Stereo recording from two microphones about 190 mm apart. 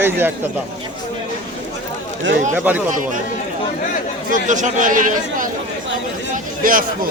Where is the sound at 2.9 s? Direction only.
45° right (ahead or behind).